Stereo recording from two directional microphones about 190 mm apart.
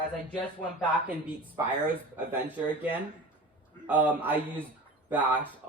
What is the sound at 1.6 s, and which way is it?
Speech, 15° right (ahead or behind).